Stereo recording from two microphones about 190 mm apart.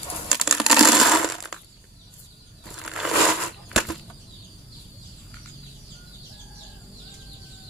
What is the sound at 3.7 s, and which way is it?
Bird flight, centre (ahead or behind).